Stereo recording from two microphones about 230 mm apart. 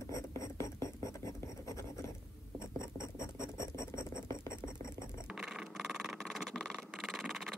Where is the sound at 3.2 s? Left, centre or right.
Centre.